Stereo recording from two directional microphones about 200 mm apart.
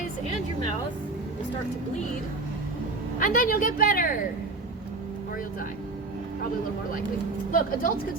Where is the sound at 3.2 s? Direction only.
45° left (ahead or behind).